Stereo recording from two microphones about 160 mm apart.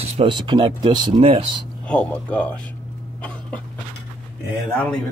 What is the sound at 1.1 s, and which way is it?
Speech, 40° right (ahead or behind).